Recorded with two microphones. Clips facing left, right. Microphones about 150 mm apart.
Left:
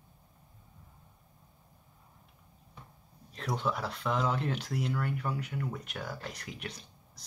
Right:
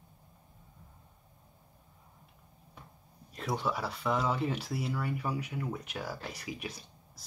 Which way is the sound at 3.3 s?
5° right (ahead or behind).